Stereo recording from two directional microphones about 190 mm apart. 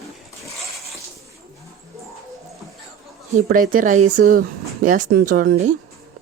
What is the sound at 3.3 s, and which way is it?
Speech, 45° right (ahead or behind).